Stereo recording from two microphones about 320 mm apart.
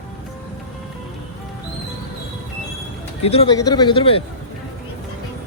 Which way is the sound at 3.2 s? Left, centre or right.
Centre.